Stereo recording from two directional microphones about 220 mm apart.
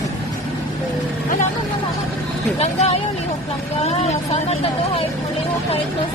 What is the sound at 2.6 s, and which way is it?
Speech, 30° left (ahead or behind).